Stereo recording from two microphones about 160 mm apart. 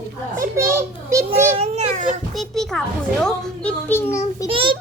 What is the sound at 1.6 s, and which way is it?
Speech, 50° right (ahead or behind).